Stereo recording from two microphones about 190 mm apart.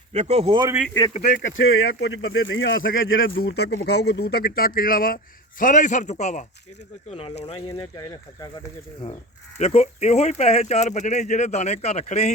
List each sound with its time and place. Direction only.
0.1 s speech: 35° right (ahead or behind)
1.5 s speech: 80° left; by 7.3 s 30° left (ahead or behind)
7.7 s speech: 20° left (ahead or behind)
9.6 s speech: 35° left (ahead or behind)